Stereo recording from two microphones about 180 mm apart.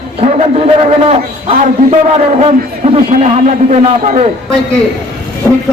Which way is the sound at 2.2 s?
35° right (ahead or behind).